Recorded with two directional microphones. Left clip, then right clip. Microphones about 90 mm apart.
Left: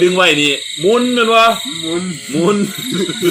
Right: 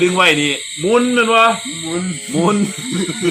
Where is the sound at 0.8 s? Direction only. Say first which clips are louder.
Left 1 dB; 5° right (ahead or behind).